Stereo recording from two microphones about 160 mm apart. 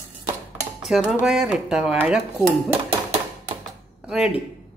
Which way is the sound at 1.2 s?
5° right (ahead or behind).